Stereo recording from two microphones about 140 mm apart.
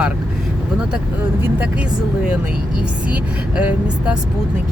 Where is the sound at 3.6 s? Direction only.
10° right (ahead or behind).